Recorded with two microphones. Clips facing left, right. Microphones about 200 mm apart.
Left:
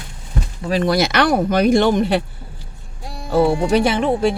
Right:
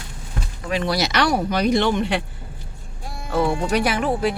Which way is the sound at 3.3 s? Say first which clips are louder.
Left 5 dB; 35° left (ahead or behind).